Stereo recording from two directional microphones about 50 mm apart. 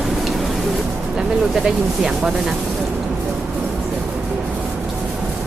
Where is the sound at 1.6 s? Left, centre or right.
Centre.